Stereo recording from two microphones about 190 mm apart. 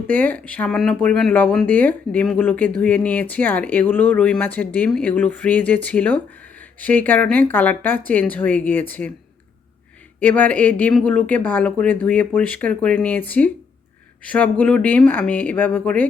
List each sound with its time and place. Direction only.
0.1 s speech: 10° left (ahead or behind)
10.2 s speech: 10° left (ahead or behind)